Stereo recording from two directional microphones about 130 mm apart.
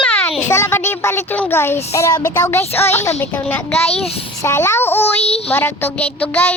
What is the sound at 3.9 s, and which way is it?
Child singing, 50° left (ahead or behind).